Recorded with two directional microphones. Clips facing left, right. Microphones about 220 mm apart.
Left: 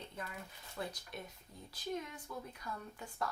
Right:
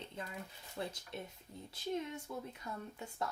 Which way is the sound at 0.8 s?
25° right (ahead or behind).